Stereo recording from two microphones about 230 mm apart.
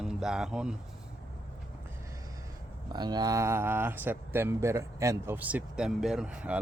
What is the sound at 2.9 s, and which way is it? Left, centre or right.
Speech, centre.